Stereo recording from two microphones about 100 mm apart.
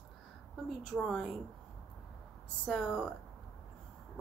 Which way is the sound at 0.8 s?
Centre (ahead or behind).